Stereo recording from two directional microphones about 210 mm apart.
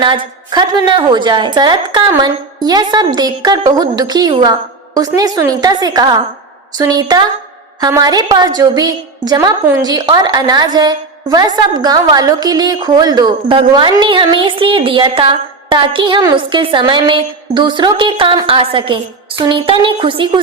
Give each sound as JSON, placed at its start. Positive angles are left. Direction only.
{"t": 0.0, "sound": "a woman's voice", "side_deg": -20}